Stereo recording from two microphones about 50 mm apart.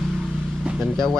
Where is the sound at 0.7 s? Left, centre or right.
Right.